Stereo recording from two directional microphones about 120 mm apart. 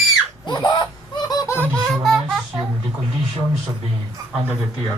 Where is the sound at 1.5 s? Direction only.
15° left (ahead or behind).